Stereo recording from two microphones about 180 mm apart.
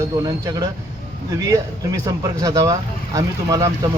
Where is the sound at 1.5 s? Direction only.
20° right (ahead or behind).